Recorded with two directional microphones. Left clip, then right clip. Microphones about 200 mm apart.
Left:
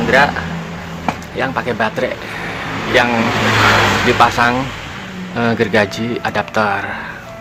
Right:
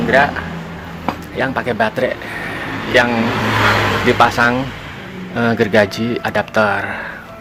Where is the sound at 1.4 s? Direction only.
15° right (ahead or behind).